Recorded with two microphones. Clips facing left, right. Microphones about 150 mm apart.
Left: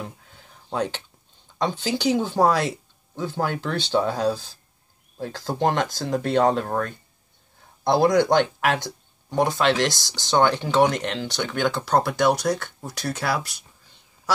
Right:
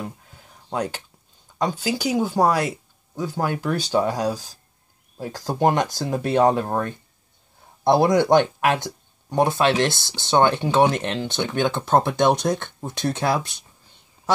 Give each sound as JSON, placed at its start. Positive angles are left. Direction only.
{"t": 0.7, "sound": "speech", "side_deg": -10}
{"t": 9.8, "sound": "speech", "side_deg": 15}
{"t": 10.1, "sound": "speech", "side_deg": -15}